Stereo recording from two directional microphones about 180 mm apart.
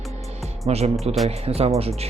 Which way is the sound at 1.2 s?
35° right (ahead or behind).